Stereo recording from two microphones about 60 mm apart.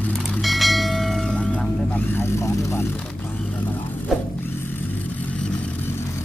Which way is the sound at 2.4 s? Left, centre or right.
Left.